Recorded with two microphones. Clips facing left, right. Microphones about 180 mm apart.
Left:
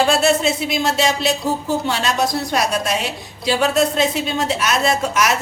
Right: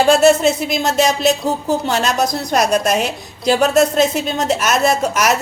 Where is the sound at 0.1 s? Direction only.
45° right (ahead or behind).